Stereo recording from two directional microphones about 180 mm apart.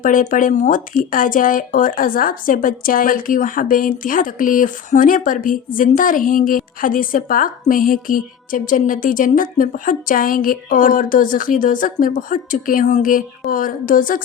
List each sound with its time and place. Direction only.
0.0 s speech: 50° left (ahead or behind)